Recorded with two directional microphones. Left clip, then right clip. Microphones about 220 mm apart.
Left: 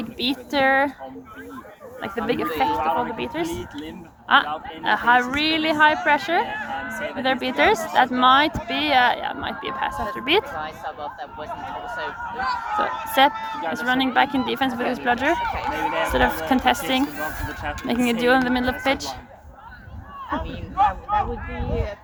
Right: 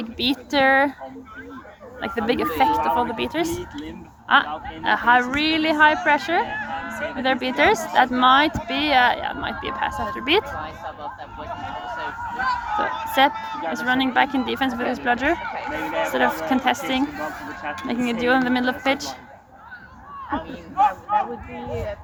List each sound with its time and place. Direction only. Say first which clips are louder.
0.0 s speech: right 2 dB; 5° right (ahead or behind)
2.0 s speech: right 2 dB; 20° right (ahead or behind)
2.7 s speech: right 2 dB; 35° right (ahead or behind)
4.3 s speech: even; 5° left (ahead or behind)
6.5 s a sound: even; 35° left (ahead or behind)
7.2 s speech: right 1 dB; centre (ahead or behind)
10.6 s a sound: left 1 dB; 35° left (ahead or behind)
12.7 s a sound: left 3 dB; 5° left (ahead or behind)
13.7 s speech: even; 5° left (ahead or behind)
15.5 s speech: left 2 dB; 45° left (ahead or behind)
16.1 s speech: right 1 dB; 15° left (ahead or behind)
18.4 s speech: even; centre (ahead or behind)
20.7 s speech: right 1 dB; 20° left (ahead or behind)